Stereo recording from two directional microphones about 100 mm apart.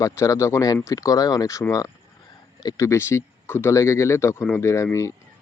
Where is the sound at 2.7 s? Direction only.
30° left (ahead or behind).